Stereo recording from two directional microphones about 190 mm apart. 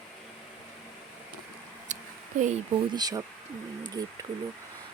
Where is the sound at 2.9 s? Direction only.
20° right (ahead or behind).